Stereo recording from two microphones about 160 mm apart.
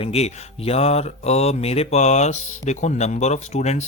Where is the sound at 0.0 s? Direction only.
40° left (ahead or behind).